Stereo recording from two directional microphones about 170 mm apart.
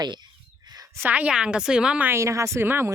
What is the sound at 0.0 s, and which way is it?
Whispering, 25° right (ahead or behind).